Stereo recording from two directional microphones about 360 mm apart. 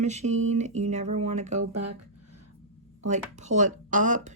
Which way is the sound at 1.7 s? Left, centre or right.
Right.